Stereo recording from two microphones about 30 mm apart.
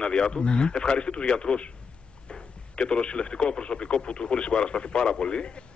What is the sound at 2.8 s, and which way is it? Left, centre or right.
Speech, left.